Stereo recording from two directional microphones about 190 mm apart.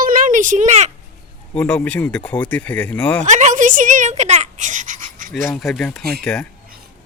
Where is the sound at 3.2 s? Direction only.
40° right (ahead or behind).